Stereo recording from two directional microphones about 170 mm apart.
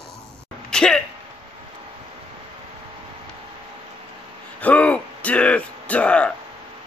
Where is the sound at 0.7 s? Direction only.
5° left (ahead or behind).